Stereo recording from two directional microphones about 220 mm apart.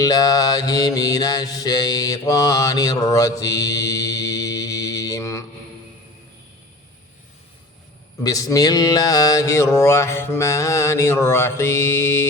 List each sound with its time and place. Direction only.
0.0 s mantra: 15° left (ahead or behind)
8.2 s mantra: 15° left (ahead or behind)